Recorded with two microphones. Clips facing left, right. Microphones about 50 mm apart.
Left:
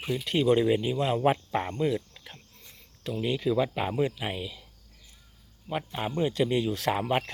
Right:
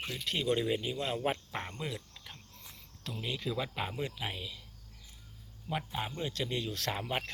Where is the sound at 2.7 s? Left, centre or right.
Centre.